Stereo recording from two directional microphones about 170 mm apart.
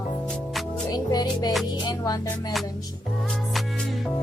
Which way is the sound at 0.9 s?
25° left (ahead or behind).